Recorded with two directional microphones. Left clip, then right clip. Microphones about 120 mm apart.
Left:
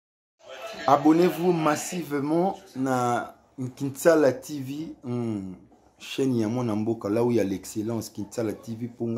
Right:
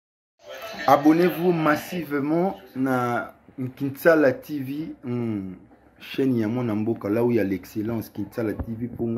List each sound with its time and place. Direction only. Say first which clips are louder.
0.8 s speech: right 2 dB; 25° left (ahead or behind)
7.0 s speech: right 1 dB; 20° left (ahead or behind)